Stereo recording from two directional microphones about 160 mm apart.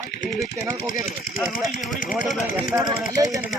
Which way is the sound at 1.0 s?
Centre (ahead or behind).